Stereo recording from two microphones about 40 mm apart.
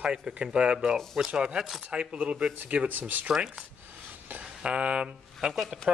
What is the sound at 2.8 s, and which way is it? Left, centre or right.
Speech, right.